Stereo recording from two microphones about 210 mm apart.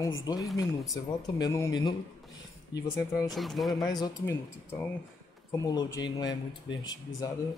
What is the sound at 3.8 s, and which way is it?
Speech, 20° left (ahead or behind).